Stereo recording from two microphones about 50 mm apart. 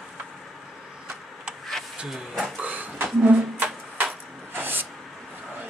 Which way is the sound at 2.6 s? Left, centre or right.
Right.